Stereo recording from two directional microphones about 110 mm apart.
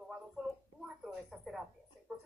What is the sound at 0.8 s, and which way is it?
Speech, centre (ahead or behind).